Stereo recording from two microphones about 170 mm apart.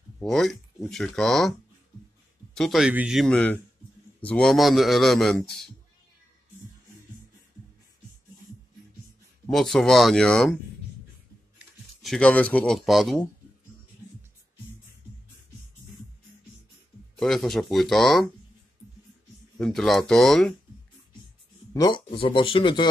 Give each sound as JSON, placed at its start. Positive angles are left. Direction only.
{"t": 0.2, "sound": "a man's voice", "side_deg": 5}
{"t": 2.5, "sound": "a man's voice", "side_deg": 0}
{"t": 9.5, "sound": "a man's voice", "side_deg": 0}
{"t": 17.2, "sound": "a man's voice", "side_deg": 0}
{"t": 19.6, "sound": "a man's voice", "side_deg": 0}
{"t": 21.7, "sound": "speech", "side_deg": 25}